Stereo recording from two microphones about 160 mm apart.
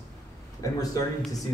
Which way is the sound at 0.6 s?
20° left (ahead or behind).